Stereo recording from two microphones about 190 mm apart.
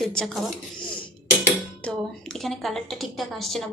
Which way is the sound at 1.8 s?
Centre (ahead or behind).